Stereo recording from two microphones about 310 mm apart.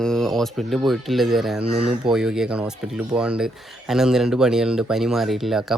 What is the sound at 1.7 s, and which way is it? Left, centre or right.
Speech, right.